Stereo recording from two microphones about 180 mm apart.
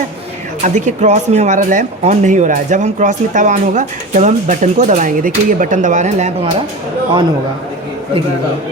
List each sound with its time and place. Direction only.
0.6 s speech: 45° right (ahead or behind)
7.1 s a man's voice: 25° right (ahead or behind)